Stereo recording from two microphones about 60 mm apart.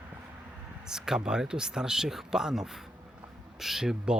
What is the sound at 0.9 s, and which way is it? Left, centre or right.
Speech, centre.